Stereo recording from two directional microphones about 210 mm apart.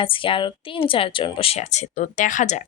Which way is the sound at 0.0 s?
25° left (ahead or behind).